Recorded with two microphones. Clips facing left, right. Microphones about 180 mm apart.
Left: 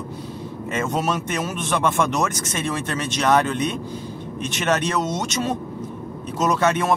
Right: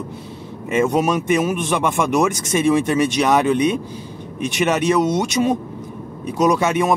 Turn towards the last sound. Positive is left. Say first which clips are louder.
# right 3 dB
turn(degrees=-10)  # may be behind; listen again after turning